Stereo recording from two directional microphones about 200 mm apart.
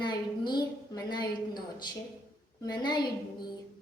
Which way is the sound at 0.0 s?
20° left (ahead or behind).